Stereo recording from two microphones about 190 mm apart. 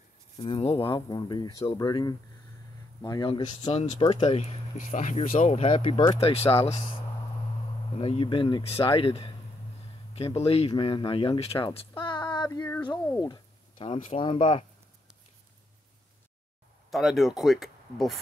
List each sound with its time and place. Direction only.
0.4 s speech: 30° left (ahead or behind)
8.0 s speech: 30° left (ahead or behind)
13.2 s a sound: 25° left (ahead or behind)
13.9 s speech: 30° left (ahead or behind)
16.9 s speech: centre (ahead or behind)